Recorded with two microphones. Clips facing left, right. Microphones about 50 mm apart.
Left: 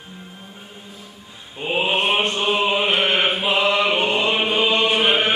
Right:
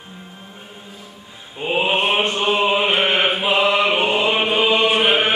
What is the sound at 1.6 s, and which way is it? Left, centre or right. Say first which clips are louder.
Mantra: right 2 dB; centre.